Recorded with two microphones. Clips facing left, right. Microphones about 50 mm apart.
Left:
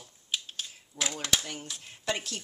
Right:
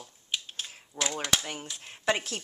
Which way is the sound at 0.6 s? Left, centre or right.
Right.